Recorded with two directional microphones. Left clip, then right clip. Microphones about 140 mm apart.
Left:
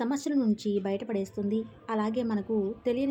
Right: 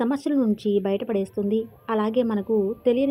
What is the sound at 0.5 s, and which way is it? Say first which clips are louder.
Speech: right 7 dB; 30° left (ahead or behind).